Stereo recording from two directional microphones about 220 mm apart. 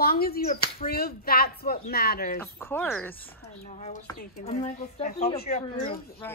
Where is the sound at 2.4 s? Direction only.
10° left (ahead or behind).